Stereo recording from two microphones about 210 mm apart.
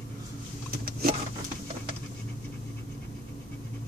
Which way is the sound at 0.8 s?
45° right (ahead or behind).